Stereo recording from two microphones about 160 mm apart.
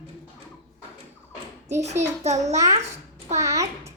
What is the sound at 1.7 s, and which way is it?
A child's voice, 45° right (ahead or behind).